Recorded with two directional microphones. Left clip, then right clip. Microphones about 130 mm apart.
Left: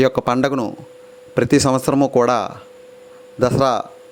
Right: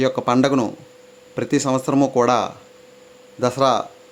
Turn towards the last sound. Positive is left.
turn(degrees=50)  # may be behind; listen again after turning